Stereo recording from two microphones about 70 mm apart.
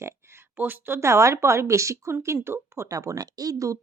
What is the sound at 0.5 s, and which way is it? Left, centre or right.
Speech, right.